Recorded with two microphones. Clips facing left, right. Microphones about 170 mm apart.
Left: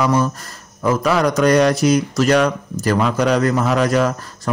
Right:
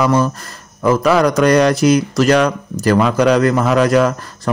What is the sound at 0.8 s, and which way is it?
A man's voice, 90° right.